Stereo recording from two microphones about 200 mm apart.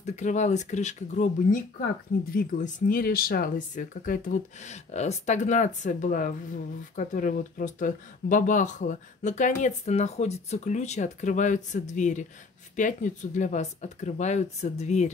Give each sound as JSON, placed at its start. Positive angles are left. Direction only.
{"t": 0.0, "sound": "speech", "side_deg": 35}